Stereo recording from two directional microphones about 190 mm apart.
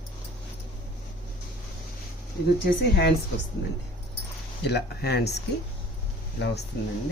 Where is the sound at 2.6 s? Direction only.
55° left (ahead or behind).